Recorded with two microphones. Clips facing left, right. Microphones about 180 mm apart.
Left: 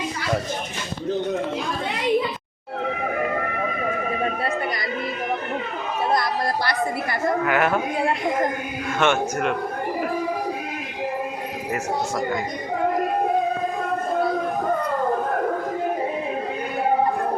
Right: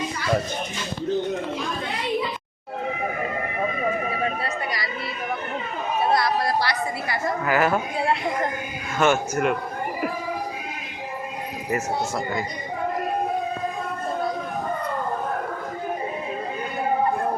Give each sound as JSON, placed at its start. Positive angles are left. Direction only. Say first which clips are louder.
{"t": 6.1, "sound": "a woman's voice", "louder": "right 1 dB", "side_deg": 50}
{"t": 7.4, "sound": "a man's voice", "louder": "right 2 dB", "side_deg": 0}
{"t": 9.0, "sound": "a man's voice", "louder": "right 1 dB", "side_deg": -5}